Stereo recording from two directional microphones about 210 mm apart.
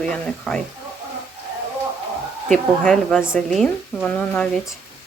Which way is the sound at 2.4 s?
Centre (ahead or behind).